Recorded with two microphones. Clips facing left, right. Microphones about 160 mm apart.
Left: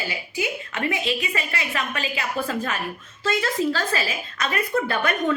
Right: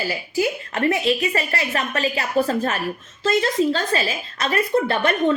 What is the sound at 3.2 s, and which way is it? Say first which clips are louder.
A woman's voice: right 4 dB; 25° right (ahead or behind).